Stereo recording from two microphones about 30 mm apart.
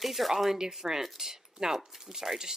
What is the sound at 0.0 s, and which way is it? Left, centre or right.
Speech, centre.